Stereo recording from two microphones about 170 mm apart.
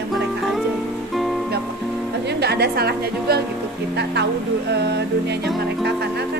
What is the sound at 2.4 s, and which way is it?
Speech, 70° right (ahead or behind).